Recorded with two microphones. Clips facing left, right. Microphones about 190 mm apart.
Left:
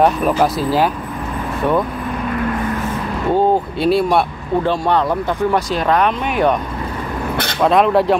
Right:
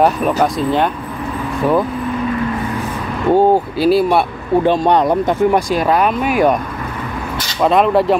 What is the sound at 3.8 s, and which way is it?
Speech, centre (ahead or behind).